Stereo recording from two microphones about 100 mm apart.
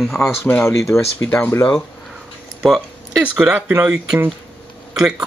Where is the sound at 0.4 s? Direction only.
25° left (ahead or behind).